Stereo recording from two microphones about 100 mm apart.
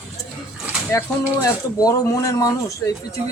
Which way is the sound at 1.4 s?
40° left (ahead or behind).